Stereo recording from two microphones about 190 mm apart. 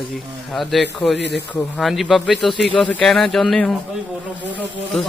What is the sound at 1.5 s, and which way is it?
A man's voice, centre (ahead or behind).